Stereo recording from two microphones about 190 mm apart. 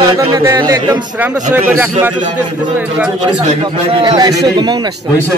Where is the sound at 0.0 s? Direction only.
20° right (ahead or behind).